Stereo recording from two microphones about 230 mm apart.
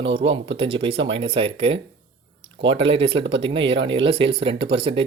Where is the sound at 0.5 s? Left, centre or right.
Right.